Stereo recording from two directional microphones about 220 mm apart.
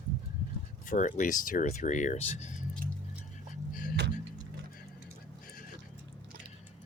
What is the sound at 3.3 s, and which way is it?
Music, 40° left (ahead or behind).